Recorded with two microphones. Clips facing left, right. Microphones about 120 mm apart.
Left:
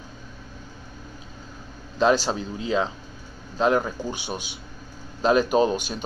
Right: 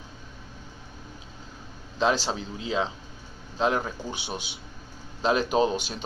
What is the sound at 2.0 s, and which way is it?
Speech, 50° left (ahead or behind).